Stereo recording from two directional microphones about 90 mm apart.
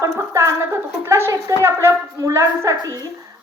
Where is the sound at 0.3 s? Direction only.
30° right (ahead or behind).